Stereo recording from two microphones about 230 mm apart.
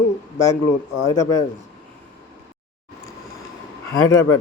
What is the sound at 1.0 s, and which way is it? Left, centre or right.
Speech, centre.